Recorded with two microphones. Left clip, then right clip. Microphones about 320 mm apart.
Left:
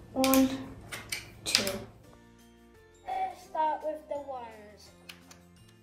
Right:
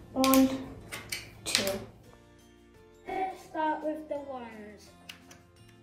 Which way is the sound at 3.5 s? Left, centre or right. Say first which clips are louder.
Left 2 dB; left.